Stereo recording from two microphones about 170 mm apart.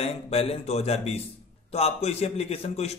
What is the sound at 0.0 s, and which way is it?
A man's voice, 35° left (ahead or behind).